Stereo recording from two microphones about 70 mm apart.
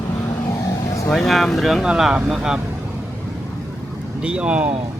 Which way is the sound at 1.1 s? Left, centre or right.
Centre.